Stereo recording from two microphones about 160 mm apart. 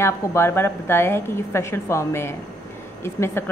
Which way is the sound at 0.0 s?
15° left (ahead or behind).